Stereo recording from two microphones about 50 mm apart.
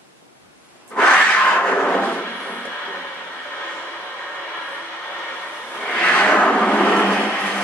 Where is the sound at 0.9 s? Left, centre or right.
Left.